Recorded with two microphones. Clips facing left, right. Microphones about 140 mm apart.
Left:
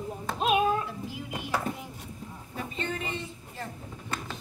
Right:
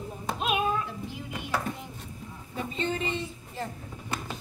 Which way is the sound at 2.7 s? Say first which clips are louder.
Right 4 dB; 25° right (ahead or behind).